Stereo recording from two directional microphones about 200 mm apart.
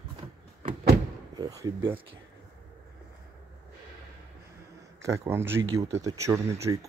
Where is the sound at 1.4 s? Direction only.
20° right (ahead or behind).